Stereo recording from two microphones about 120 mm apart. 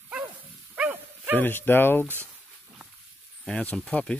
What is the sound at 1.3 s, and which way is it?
Speech, 15° left (ahead or behind).